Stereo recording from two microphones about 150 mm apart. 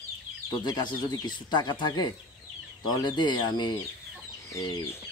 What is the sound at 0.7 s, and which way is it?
Speech, 30° left (ahead or behind).